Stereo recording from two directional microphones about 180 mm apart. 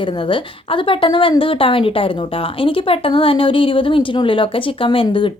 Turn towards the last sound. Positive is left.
turn(degrees=30)  # may be behind; listen again after turning